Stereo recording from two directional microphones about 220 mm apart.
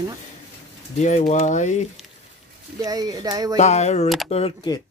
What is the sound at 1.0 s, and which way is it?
Speech, 30° left (ahead or behind).